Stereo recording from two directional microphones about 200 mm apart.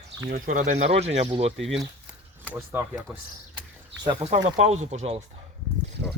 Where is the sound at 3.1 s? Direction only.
Centre (ahead or behind).